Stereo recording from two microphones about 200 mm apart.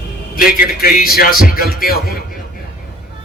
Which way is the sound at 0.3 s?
45° left (ahead or behind).